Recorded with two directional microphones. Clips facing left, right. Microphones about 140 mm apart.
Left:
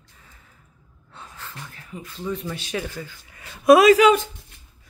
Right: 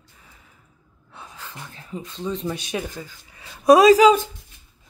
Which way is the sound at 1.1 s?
10° right (ahead or behind).